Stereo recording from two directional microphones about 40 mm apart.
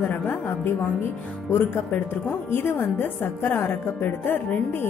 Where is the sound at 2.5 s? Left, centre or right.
Left.